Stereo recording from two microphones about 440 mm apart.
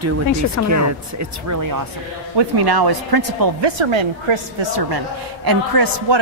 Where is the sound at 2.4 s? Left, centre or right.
Right.